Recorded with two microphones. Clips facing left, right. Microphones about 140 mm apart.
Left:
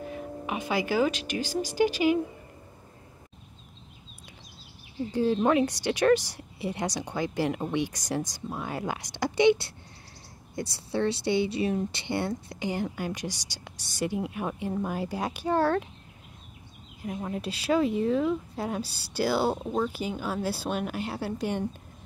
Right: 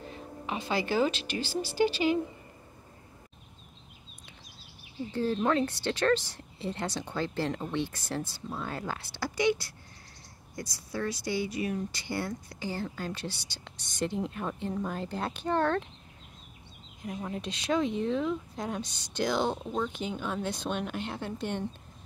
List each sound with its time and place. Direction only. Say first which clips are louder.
0.5 s a woman's voice: left 2 dB; 10° left (ahead or behind)
5.1 s a woman's voice: left 4 dB; 15° left (ahead or behind)
17.0 s a woman's voice: left 3 dB; 5° left (ahead or behind)